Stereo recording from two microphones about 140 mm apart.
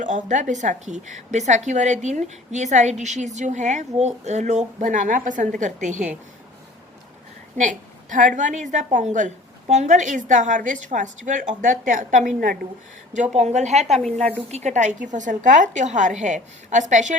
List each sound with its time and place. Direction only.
0.0 s a woman's voice: 60° right (ahead or behind)
8.4 s a woman's voice: 60° right (ahead or behind); by 12.5 s 85° right
13.3 s a woman's voice: 55° right (ahead or behind)
14.0 s a woman's voice: 5° left (ahead or behind)
14.5 s a woman's voice: 55° right (ahead or behind)